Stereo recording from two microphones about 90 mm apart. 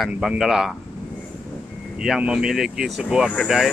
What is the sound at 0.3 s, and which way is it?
Speech, 5° right (ahead or behind).